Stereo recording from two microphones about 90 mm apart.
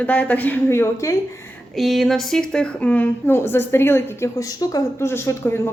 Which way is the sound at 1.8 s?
Centre (ahead or behind).